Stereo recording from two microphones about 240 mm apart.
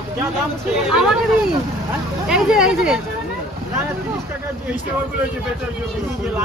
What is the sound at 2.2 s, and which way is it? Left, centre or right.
Speech, centre.